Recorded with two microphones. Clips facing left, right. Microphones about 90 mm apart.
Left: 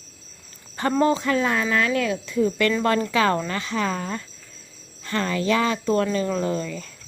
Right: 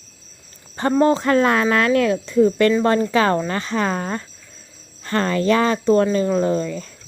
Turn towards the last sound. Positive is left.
turn(degrees=-35)  # may be behind; listen again after turning